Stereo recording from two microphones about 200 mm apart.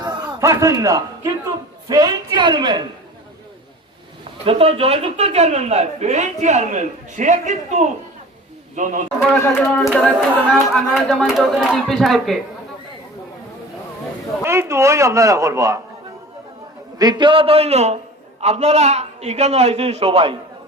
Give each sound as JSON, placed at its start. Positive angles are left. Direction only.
{"t": 0.0, "sound": "a man's voice", "side_deg": -15}
{"t": 4.4, "sound": "a man's voice", "side_deg": -30}
{"t": 9.5, "sound": "speech", "side_deg": 10}
{"t": 14.4, "sound": "a man's voice", "side_deg": -15}
{"t": 17.0, "sound": "speech", "side_deg": -20}